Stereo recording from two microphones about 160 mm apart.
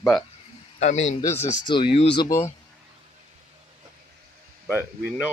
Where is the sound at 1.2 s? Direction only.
15° left (ahead or behind).